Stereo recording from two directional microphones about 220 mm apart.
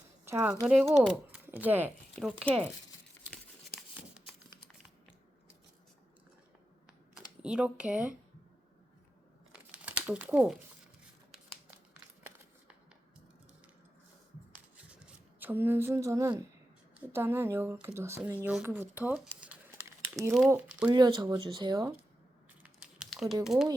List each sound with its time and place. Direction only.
0.3 s speech: 10° right (ahead or behind)
7.4 s speech: 5° right (ahead or behind)
9.5 s crumpling: 5° right (ahead or behind)
14.5 s a sound: 5° right (ahead or behind)
17.1 s speech: 10° right (ahead or behind)
22.6 s typing: 5° right (ahead or behind)